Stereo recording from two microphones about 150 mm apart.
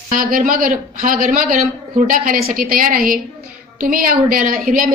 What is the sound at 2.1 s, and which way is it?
A woman's voice, 70° right (ahead or behind).